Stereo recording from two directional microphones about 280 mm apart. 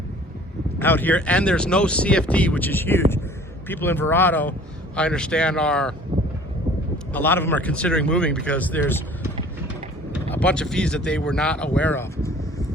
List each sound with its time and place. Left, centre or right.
0.8 s speech: centre
6.1 s a sound: centre
7.1 s speech: centre
10.2 s speech: centre